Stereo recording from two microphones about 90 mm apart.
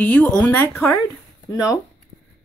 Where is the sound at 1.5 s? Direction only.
40° left (ahead or behind).